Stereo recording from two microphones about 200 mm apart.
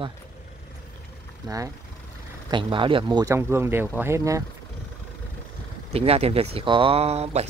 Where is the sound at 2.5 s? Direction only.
25° right (ahead or behind).